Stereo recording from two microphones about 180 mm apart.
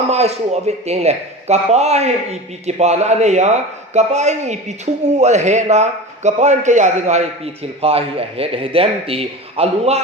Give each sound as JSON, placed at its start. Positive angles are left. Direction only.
{"t": 0.1, "sound": "a man's voice", "side_deg": -35}